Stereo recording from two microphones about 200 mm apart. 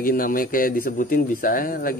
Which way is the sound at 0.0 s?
45° left (ahead or behind).